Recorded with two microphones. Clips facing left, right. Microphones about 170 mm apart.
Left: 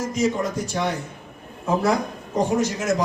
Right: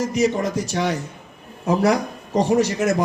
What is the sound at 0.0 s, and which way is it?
A man's voice, 70° right (ahead or behind).